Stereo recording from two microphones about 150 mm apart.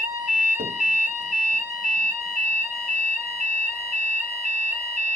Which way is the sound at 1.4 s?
55° right (ahead or behind).